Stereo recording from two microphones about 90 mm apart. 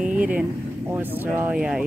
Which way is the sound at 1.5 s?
10° right (ahead or behind).